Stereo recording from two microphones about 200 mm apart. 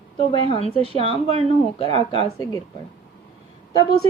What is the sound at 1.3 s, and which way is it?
Speech, 30° right (ahead or behind).